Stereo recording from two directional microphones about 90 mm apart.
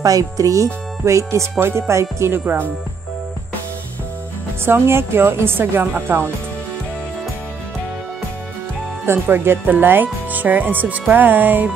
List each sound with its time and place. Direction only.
0.0 s speech: 40° right (ahead or behind); by 2.7 s 25° right (ahead or behind)
4.6 s speech: 25° right (ahead or behind)
9.0 s speech: 25° right (ahead or behind)